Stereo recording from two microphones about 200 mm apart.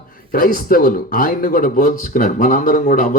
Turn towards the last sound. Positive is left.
turn(degrees=45)  # may be behind; listen again after turning